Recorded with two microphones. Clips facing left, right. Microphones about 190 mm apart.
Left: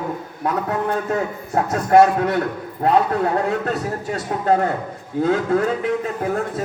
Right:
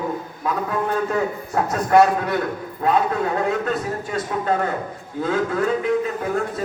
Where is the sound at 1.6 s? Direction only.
60° left (ahead or behind).